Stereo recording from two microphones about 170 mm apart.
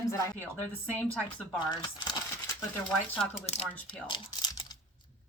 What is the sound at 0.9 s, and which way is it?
Speech, 10° left (ahead or behind).